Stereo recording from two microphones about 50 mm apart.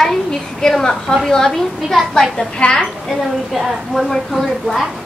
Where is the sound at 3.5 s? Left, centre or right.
Centre.